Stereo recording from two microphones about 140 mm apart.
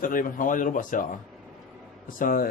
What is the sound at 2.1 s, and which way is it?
Speech, 80° left.